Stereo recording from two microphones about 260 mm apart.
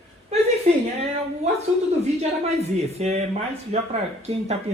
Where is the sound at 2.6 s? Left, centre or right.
Right.